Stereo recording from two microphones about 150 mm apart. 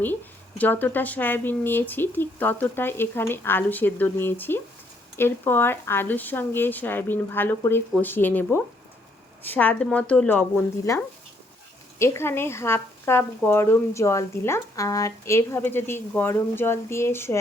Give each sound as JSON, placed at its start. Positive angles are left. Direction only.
{"t": 0.6, "sound": "speech", "side_deg": 10}